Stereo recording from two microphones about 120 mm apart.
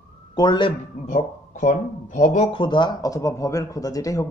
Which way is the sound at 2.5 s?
40° left (ahead or behind).